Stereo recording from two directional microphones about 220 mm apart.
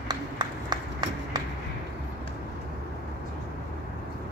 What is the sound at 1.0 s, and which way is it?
Run, 20° right (ahead or behind).